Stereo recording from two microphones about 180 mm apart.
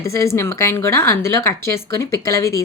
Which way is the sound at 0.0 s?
15° left (ahead or behind).